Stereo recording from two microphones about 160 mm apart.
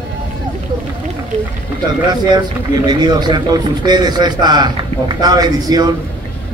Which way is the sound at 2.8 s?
25° right (ahead or behind).